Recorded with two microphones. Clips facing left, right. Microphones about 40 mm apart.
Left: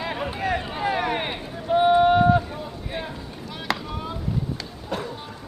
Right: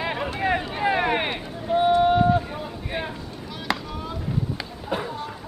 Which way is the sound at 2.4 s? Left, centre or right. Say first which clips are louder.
Right 1 dB; centre.